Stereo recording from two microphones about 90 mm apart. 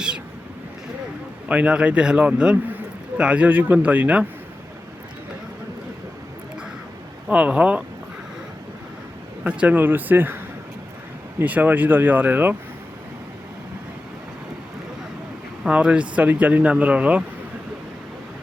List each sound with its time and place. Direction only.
1.5 s a man's voice: 15° right (ahead or behind)
7.3 s a man's voice: 15° right (ahead or behind)
9.4 s speech: 15° right (ahead or behind)
11.3 s speech: 20° right (ahead or behind)
15.6 s a man's voice: 10° right (ahead or behind)